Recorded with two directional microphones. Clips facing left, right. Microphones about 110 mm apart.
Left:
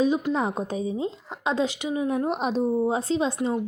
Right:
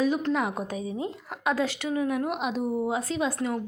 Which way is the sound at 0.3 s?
30° left (ahead or behind).